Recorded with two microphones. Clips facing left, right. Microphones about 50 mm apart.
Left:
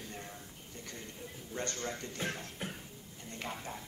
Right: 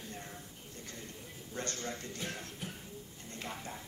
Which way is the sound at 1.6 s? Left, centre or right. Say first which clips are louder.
Left 1 dB; left.